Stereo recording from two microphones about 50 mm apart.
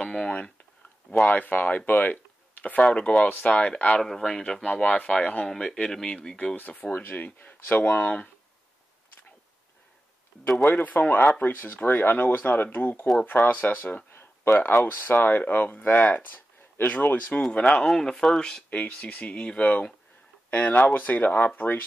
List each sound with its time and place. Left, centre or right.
0.0 s a sound: centre
1.2 s speech: left
4.0 s speech: centre
4.7 s speech: left
5.5 s speech: centre
6.5 s speech: left
6.9 s speech: left
10.6 s speech: left
11.4 s speech: left
17.7 s speech: centre
18.7 s speech: left